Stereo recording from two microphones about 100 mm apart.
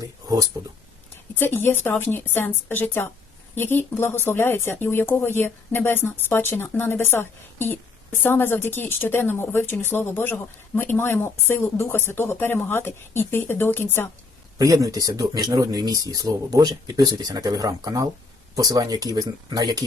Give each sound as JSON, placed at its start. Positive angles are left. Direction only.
{"t": 0.0, "sound": "a sound", "side_deg": -40}
{"t": 1.4, "sound": "speech", "side_deg": 20}
{"t": 14.6, "sound": "speech", "side_deg": -35}